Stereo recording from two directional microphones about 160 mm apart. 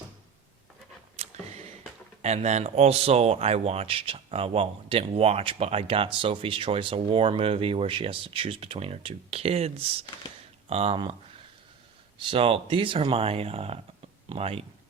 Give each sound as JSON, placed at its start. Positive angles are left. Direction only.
{"t": 1.1, "sound": "a sound", "side_deg": -45}
{"t": 2.2, "sound": "speech", "side_deg": -45}
{"t": 12.3, "sound": "speech", "side_deg": -35}